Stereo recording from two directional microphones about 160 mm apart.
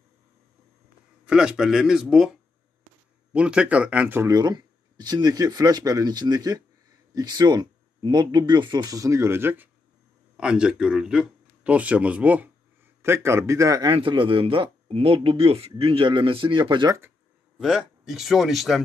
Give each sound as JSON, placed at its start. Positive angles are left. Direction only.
{"t": 1.2, "sound": "a man's voice", "side_deg": -5}
{"t": 3.3, "sound": "a man's voice", "side_deg": -5}
{"t": 17.6, "sound": "a man's voice", "side_deg": 0}